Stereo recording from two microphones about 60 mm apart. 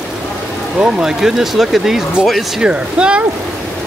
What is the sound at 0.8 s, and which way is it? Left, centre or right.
Speech, centre.